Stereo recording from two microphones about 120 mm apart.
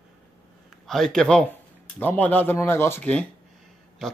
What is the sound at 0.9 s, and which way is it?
Speech, 5° left (ahead or behind).